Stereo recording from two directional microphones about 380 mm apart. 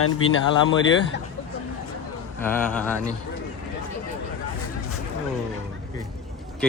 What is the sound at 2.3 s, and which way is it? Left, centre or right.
Speech, centre.